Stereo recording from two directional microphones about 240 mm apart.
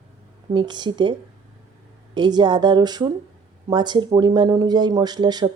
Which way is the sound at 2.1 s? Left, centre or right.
Centre.